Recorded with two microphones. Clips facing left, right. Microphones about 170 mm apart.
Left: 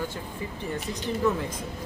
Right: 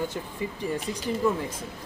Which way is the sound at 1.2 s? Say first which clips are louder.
Even; 10° right (ahead or behind).